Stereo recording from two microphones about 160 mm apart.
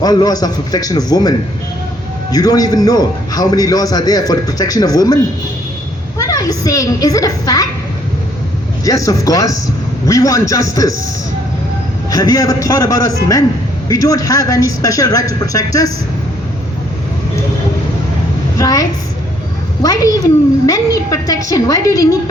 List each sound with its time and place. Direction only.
0.0 s a man's voice: 25° left (ahead or behind)
2.3 s a man's voice: 25° left (ahead or behind)
8.8 s a man's voice: 20° left (ahead or behind)
12.1 s a man's voice: 25° left (ahead or behind)
18.5 s a woman's voice: 20° left (ahead or behind)